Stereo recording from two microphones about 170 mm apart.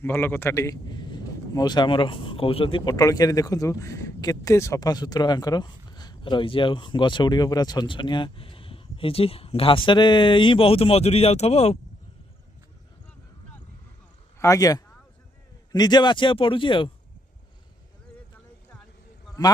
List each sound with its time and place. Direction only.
0.0 s speech: 10° left (ahead or behind); by 11.8 s 35° left (ahead or behind)
14.4 s speech: 20° left (ahead or behind)